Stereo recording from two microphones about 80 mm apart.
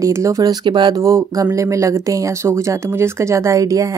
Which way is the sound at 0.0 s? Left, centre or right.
Right.